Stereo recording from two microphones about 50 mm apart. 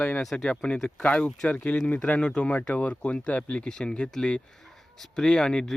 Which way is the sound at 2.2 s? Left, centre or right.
Centre.